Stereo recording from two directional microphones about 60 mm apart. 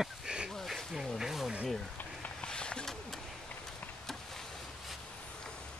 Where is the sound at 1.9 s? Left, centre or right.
Left.